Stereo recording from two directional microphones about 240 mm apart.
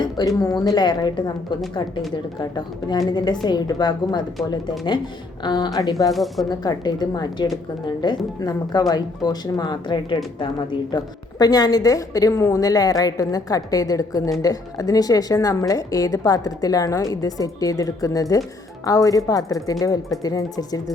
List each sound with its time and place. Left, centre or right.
0.0 s a woman's voice: centre
5.4 s a woman's voice: centre
6.1 s speech: centre
6.5 s a woman's voice: centre